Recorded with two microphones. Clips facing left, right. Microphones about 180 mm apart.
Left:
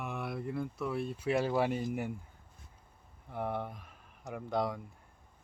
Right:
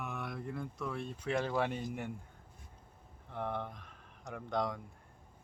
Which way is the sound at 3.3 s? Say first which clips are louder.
Left 2 dB; 10° left (ahead or behind).